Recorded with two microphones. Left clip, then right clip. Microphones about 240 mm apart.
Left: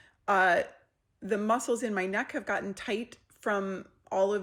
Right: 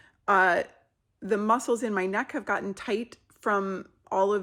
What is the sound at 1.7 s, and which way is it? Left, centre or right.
Speech, right.